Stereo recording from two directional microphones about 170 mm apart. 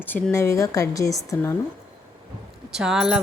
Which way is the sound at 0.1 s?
15° left (ahead or behind).